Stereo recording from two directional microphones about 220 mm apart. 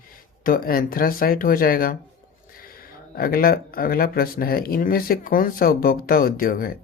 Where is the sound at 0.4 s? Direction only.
40° left (ahead or behind).